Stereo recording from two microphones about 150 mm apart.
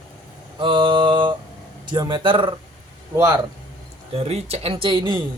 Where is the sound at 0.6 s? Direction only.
35° right (ahead or behind).